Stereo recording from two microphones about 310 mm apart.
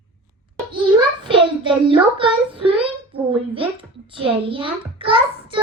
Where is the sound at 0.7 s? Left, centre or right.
Centre.